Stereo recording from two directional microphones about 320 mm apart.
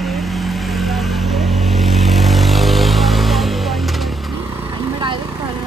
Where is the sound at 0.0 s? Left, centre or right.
Centre.